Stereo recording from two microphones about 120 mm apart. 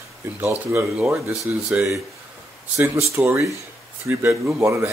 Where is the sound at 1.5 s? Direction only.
10° right (ahead or behind).